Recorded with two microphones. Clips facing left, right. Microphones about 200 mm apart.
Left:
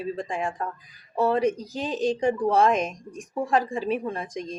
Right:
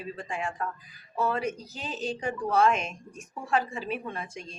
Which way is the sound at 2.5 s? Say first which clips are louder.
Even; 35° left (ahead or behind).